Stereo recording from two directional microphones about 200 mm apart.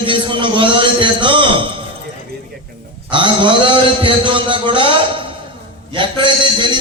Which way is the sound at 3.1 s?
25° right (ahead or behind).